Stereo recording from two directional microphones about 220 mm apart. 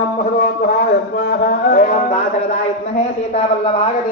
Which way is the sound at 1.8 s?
30° left (ahead or behind).